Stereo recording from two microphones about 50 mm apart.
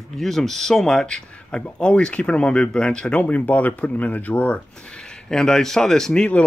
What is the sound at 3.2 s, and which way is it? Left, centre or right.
Speech, left.